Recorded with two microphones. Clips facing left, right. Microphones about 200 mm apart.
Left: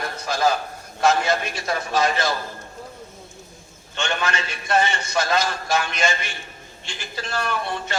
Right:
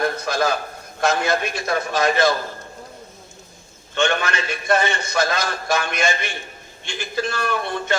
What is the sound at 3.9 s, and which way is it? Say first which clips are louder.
A man's voice: right 4 dB; 55° right (ahead or behind).